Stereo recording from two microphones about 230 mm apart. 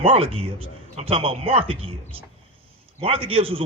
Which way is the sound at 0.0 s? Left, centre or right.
Right.